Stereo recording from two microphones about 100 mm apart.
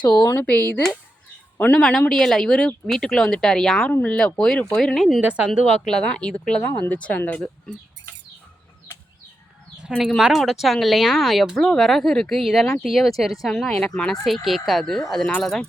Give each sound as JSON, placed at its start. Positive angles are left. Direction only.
{"t": 0.3, "sound": "a woman's voice", "side_deg": 15}
{"t": 1.8, "sound": "speech", "side_deg": 5}
{"t": 5.2, "sound": "a woman's voice", "side_deg": -10}
{"t": 5.5, "sound": "speech", "side_deg": 5}
{"t": 10.0, "sound": "speech", "side_deg": -5}